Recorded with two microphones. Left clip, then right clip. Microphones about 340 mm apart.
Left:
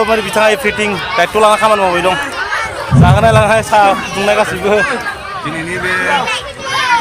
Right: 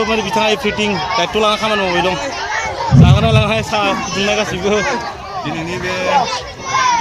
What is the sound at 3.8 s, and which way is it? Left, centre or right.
Speech, left.